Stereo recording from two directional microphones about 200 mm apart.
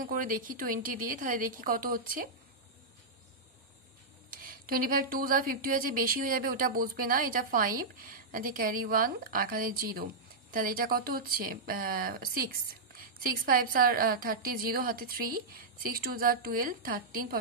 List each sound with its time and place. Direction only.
0.0 s speech: 45° right (ahead or behind)
4.3 s speech: 45° right (ahead or behind)